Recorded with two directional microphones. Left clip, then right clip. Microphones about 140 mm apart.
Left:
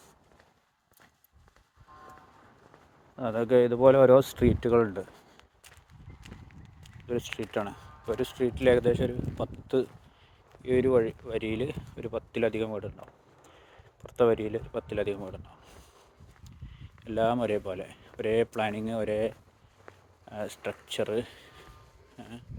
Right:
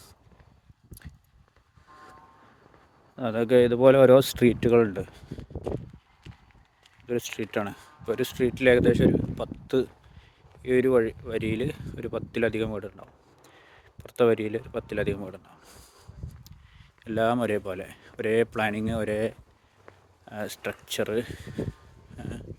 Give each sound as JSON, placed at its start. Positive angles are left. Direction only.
{"t": 3.2, "sound": "speech", "side_deg": -60}
{"t": 7.1, "sound": "speech", "side_deg": -50}
{"t": 22.2, "sound": "a sound", "side_deg": -50}